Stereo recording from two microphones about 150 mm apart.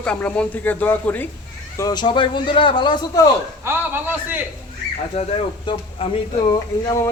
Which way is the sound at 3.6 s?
15° right (ahead or behind).